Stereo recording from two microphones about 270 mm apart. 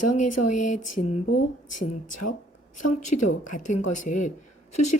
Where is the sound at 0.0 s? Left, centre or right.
Left.